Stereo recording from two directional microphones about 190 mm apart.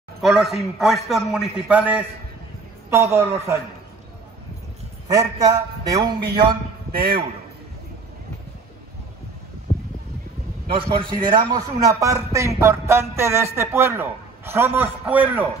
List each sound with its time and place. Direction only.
0.2 s a man's voice: centre (ahead or behind)
5.4 s a man's voice: 20° right (ahead or behind)
6.9 s a man's voice: 50° right (ahead or behind)
10.7 s a man's voice: 25° right (ahead or behind); by 15.4 s 10° right (ahead or behind)